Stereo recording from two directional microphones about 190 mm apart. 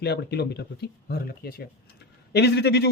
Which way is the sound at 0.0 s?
60° left (ahead or behind).